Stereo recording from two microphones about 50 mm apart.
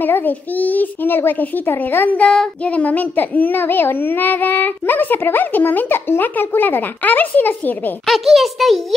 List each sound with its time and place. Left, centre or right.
0.0 s a woman's voice: left
2.6 s speech: left
8.1 s a child's voice: centre